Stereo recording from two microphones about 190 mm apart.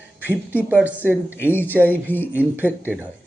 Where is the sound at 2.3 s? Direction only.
10° right (ahead or behind).